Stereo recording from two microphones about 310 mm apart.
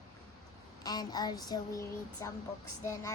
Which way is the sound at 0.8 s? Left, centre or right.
Centre.